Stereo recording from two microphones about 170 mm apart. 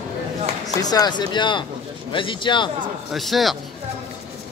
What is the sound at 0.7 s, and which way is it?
Speech, 20° left (ahead or behind).